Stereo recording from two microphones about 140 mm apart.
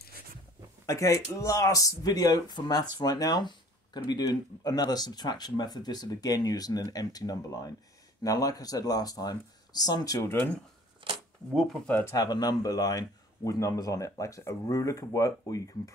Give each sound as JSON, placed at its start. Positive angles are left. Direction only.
{"t": 0.8, "sound": "speech", "side_deg": 20}
{"t": 11.0, "sound": "camera", "side_deg": -35}
{"t": 11.5, "sound": "speech", "side_deg": 5}
{"t": 12.1, "sound": "speech", "side_deg": 30}